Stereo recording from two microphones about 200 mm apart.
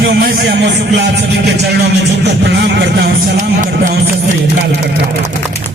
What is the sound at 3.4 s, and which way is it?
Speech, 40° right (ahead or behind).